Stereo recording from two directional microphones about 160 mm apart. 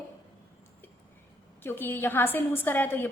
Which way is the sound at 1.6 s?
15° left (ahead or behind).